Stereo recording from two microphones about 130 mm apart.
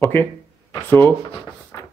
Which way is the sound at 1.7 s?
20° left (ahead or behind).